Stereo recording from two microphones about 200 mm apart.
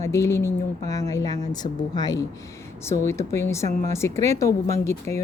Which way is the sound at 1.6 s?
20° left (ahead or behind).